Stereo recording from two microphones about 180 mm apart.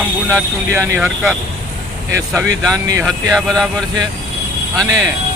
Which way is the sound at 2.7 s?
15° right (ahead or behind).